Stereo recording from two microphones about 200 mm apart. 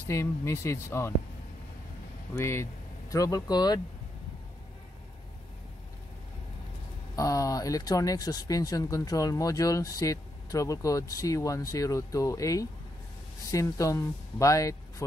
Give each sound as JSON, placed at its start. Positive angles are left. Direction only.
{"t": 0.1, "sound": "speech", "side_deg": 15}
{"t": 2.3, "sound": "speech", "side_deg": 15}
{"t": 7.2, "sound": "speech", "side_deg": 15}